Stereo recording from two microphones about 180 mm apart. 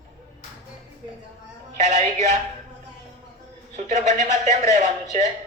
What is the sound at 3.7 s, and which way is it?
Speech, 40° right (ahead or behind).